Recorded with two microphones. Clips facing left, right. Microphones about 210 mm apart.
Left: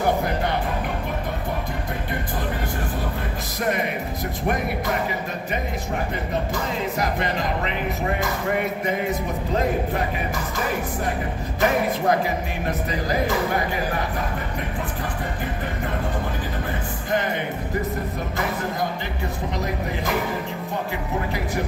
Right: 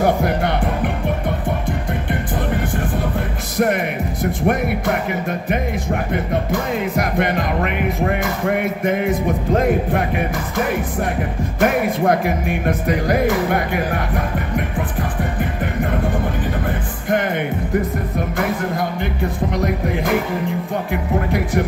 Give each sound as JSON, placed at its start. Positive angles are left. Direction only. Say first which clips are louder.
{"t": 0.0, "sound": "music", "louder": "right 5 dB", "side_deg": -70}
{"t": 3.5, "sound": "music", "louder": "right 7 dB", "side_deg": -55}
{"t": 4.4, "sound": "speech", "louder": "right 5 dB", "side_deg": -60}
{"t": 11.6, "sound": "speech", "louder": "right 4 dB", "side_deg": -55}